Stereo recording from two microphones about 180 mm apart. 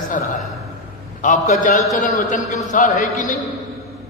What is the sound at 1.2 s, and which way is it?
A man's voice, 45° left (ahead or behind).